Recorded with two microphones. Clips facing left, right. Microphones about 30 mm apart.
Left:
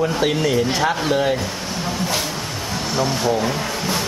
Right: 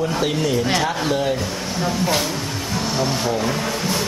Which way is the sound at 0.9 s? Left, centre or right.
Centre.